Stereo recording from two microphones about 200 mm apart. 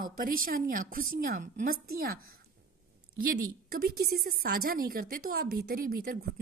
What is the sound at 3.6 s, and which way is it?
A woman's voice, 50° right (ahead or behind).